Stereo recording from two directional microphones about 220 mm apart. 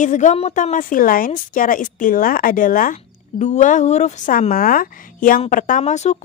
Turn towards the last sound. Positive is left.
turn(degrees=30)  # may be behind; listen again after turning